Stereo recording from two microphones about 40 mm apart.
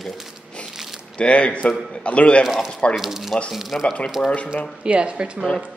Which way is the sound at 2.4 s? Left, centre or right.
Centre.